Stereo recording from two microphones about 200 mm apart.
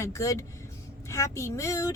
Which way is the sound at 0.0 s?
15° left (ahead or behind).